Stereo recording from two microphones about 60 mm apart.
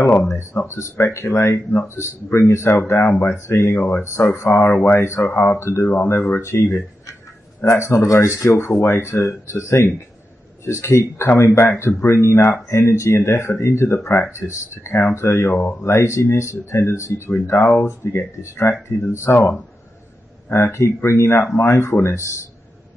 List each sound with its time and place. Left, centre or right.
0.0 s speech: left
0.4 s speech: left
5.2 s speech: left
5.6 s speech: left